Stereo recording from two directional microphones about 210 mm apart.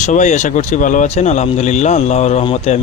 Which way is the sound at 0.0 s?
35° left (ahead or behind).